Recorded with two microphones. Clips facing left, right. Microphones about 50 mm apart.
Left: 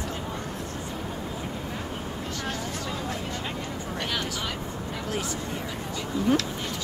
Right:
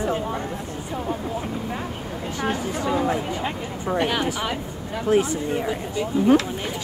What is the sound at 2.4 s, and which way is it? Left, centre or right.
Speech, right.